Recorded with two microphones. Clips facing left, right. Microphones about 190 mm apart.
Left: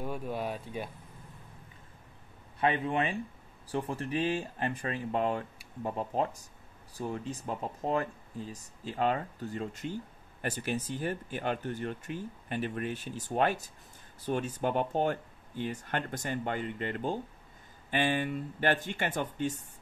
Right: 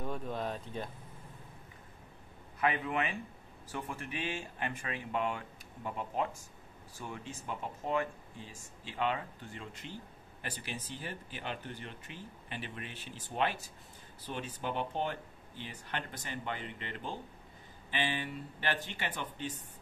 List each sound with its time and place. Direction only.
0.0 s speech: 10° left (ahead or behind)
2.6 s speech: 30° left (ahead or behind); by 19.5 s 45° left (ahead or behind)